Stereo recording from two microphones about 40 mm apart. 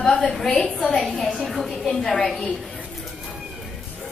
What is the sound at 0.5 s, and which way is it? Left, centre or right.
Speech, left.